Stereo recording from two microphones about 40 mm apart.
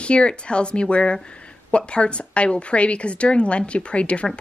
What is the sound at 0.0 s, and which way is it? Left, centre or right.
A woman's voice, left.